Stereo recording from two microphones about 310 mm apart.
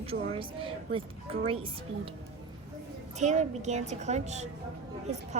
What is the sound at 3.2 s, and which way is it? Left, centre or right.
A woman's voice, right.